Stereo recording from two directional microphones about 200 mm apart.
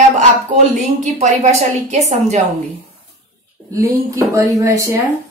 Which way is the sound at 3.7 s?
15° right (ahead or behind).